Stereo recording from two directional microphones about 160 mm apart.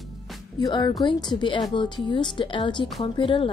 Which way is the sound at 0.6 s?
25° left (ahead or behind).